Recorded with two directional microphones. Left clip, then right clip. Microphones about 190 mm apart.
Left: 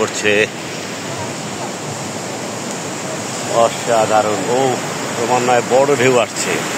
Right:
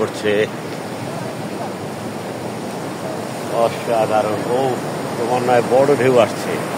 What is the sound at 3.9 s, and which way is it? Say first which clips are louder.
Speech: left 3 dB; 50° left (ahead or behind).